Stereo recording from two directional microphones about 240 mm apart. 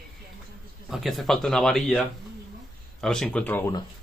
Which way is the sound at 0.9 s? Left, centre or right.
Centre.